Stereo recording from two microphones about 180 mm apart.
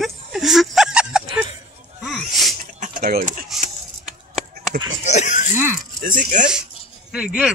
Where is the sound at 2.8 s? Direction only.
50° right (ahead or behind).